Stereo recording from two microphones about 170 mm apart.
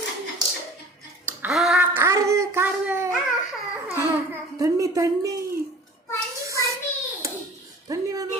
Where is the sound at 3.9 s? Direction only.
15° right (ahead or behind).